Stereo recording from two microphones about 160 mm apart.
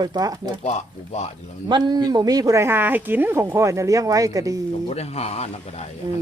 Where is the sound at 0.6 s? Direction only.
45° left (ahead or behind).